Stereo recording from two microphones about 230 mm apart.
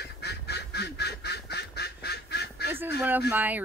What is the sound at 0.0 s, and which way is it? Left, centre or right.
Duck, left.